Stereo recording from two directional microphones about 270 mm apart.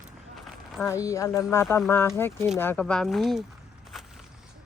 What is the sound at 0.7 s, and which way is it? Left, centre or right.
Speech, centre.